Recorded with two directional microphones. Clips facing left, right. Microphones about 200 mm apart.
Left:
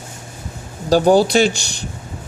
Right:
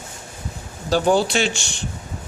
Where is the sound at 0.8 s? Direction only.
40° left (ahead or behind).